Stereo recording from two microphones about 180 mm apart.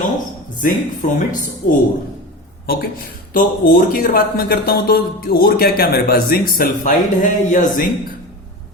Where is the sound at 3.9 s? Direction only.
55° left (ahead or behind).